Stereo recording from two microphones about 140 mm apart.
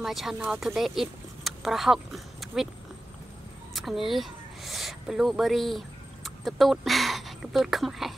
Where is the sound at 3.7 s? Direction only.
Centre (ahead or behind).